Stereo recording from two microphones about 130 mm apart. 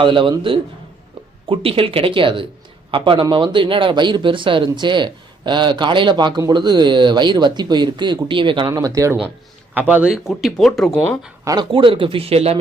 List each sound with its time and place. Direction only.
0.0 s speech: 40° right (ahead or behind); by 9.1 s 25° right (ahead or behind)
9.7 s speech: 15° right (ahead or behind); by 11.0 s 5° left (ahead or behind)
11.4 s speech: 35° right (ahead or behind); by 12.5 s 50° right (ahead or behind)